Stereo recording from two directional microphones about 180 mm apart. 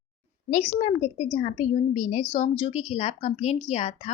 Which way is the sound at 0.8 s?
40° left (ahead or behind).